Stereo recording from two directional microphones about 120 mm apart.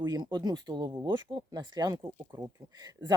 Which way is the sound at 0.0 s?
35° right (ahead or behind).